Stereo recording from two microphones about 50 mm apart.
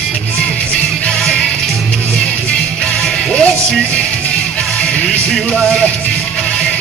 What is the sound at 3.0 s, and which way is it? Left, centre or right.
Music, centre.